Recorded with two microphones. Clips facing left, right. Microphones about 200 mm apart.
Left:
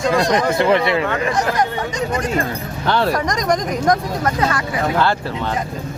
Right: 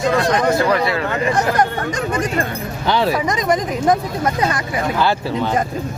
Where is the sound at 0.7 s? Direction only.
25° left (ahead or behind).